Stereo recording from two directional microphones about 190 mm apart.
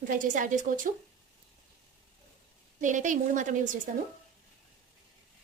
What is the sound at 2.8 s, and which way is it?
A woman's voice, 40° right (ahead or behind).